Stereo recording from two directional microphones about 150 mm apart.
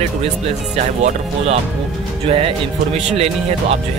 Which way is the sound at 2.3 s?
40° right (ahead or behind).